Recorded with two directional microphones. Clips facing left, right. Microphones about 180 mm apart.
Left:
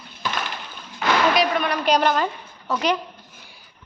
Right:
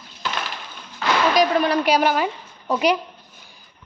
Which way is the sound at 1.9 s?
10° right (ahead or behind).